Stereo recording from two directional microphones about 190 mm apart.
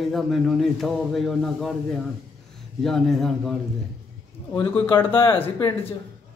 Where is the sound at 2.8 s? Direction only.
Centre (ahead or behind).